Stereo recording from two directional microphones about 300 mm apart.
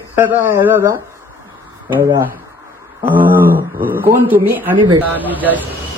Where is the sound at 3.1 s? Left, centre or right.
Right.